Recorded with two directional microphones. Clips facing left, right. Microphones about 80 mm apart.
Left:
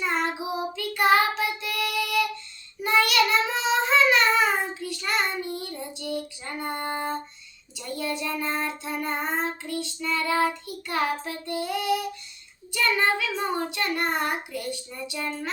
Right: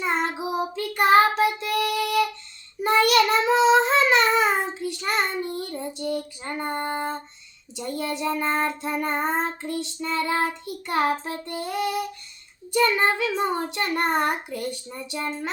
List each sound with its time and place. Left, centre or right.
0.0 s child singing: right
0.5 s child singing: right
12.7 s a child's voice: right